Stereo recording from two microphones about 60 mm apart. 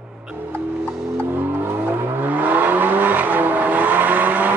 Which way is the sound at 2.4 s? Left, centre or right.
Right.